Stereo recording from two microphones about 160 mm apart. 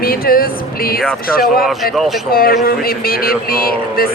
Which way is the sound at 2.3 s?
65° left (ahead or behind).